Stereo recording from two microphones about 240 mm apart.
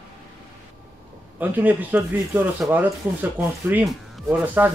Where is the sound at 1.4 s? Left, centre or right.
Centre.